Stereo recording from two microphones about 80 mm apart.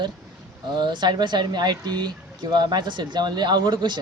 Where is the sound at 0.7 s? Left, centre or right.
Right.